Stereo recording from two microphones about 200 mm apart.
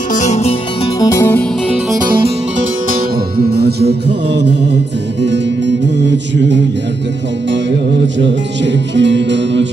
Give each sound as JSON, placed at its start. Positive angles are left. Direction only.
{"t": 0.1, "sound": "music", "side_deg": 35}
{"t": 0.9, "sound": "music", "side_deg": 15}
{"t": 2.9, "sound": "music", "side_deg": -50}
{"t": 5.2, "sound": "music", "side_deg": -60}
{"t": 8.9, "sound": "music", "side_deg": -60}